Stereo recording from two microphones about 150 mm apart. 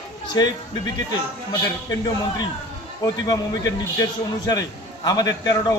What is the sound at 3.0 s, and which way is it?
Speech, 25° left (ahead or behind).